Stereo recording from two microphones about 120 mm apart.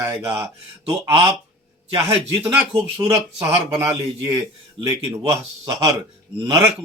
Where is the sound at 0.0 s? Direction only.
30° right (ahead or behind).